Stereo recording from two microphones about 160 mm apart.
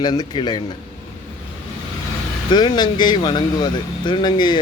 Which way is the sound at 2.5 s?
30° left (ahead or behind).